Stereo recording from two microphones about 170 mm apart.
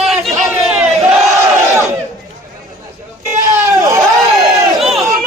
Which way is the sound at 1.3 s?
20° right (ahead or behind).